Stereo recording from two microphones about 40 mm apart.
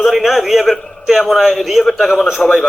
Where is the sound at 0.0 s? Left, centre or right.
Centre.